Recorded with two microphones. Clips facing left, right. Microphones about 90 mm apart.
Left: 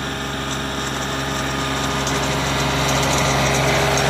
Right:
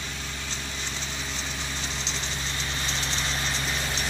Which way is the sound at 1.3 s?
60° left (ahead or behind).